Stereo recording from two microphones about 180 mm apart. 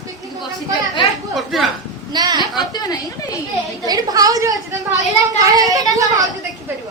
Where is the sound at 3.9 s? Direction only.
20° right (ahead or behind).